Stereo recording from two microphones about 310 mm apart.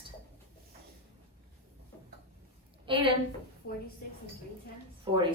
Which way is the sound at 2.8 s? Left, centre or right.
Centre.